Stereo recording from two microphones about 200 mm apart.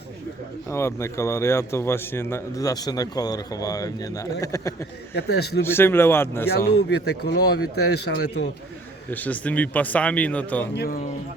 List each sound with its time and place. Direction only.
0.7 s a man's voice: 15° left (ahead or behind)
5.1 s speech: 55° left (ahead or behind)
5.6 s a man's voice: 10° left (ahead or behind)
6.7 s speech: 55° left (ahead or behind)
9.0 s a man's voice: 10° left (ahead or behind)
10.8 s speech: 45° left (ahead or behind)